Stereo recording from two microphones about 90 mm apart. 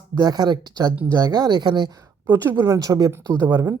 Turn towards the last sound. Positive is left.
turn(degrees=-30)  # may be behind; listen again after turning